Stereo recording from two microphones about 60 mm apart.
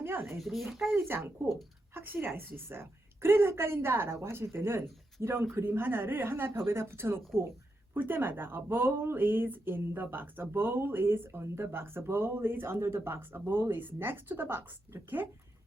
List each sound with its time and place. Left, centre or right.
0.0 s a child's voice: right
0.3 s a child's voice: centre
0.9 s speech: right